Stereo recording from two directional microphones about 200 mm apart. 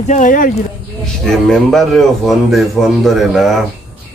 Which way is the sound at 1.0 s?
Centre (ahead or behind).